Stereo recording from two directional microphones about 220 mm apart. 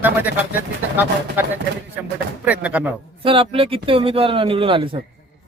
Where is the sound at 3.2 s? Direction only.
25° right (ahead or behind).